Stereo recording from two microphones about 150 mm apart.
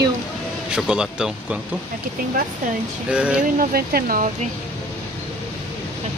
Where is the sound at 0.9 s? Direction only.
5° right (ahead or behind).